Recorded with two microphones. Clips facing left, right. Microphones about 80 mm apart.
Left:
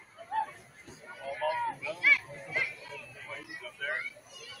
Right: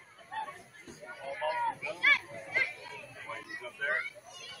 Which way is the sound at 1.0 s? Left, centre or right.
Centre.